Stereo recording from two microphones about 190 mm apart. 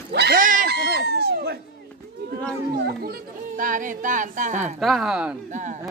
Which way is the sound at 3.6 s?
45° right (ahead or behind).